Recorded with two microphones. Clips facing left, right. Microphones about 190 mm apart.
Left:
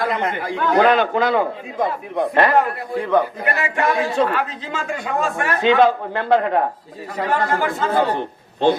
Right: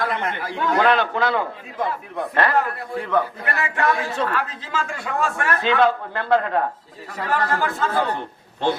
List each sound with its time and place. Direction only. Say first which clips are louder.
0.0 s a man's voice: left 3 dB; 20° left (ahead or behind)